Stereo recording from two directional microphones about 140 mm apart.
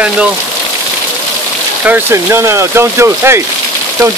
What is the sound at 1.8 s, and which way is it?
Speech, 15° right (ahead or behind).